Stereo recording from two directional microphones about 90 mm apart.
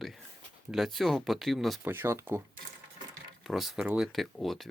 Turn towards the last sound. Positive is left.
turn(degrees=0)  # may be behind; listen again after turning